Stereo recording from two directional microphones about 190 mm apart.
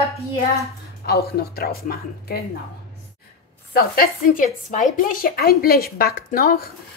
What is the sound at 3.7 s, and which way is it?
Speech, 50° left (ahead or behind).